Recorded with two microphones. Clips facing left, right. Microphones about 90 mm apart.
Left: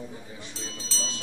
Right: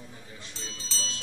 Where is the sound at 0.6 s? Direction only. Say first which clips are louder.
Left 2 dB; centre (ahead or behind).